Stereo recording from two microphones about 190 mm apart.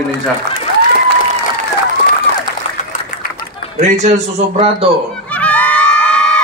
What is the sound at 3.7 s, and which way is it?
A man's voice, 35° right (ahead or behind).